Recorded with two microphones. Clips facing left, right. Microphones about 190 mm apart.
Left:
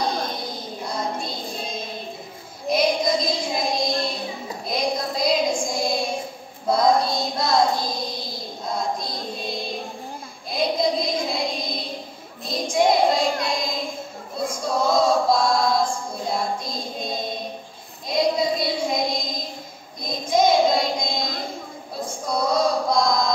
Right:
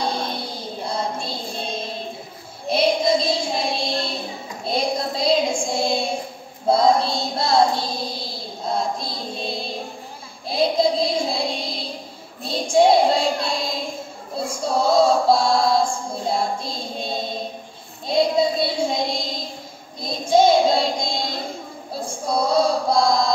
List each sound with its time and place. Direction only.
0.0 s music: 30° right (ahead or behind)
2.7 s child singing: 30° right (ahead or behind)
14.5 s female singing: 30° right (ahead or behind)
18.0 s child singing: 30° right (ahead or behind)
22.0 s chant: 30° right (ahead or behind)